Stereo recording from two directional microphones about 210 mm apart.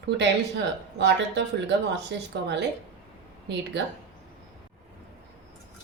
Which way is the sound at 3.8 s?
55° right (ahead or behind).